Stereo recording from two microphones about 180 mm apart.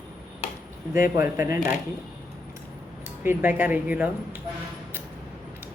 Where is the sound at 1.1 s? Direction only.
15° right (ahead or behind).